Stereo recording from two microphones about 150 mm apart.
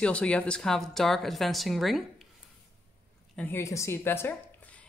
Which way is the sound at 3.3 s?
15° left (ahead or behind).